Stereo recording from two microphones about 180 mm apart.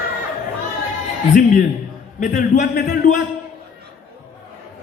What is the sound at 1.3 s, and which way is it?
A man's voice, 45° left (ahead or behind).